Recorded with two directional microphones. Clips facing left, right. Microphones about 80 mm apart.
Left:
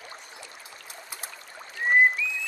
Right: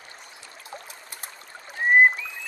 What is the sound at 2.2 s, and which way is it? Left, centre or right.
Frog, right.